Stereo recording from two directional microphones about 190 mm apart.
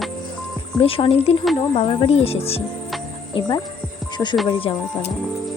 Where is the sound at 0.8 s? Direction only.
30° left (ahead or behind).